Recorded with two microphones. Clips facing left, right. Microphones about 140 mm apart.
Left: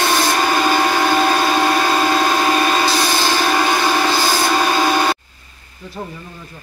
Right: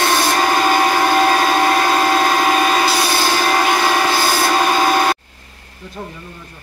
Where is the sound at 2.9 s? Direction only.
10° right (ahead or behind).